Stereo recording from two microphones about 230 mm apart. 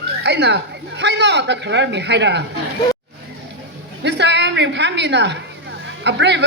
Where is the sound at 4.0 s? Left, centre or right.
Right.